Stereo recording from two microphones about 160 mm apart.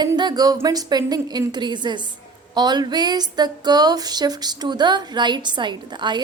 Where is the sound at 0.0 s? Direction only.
25° right (ahead or behind).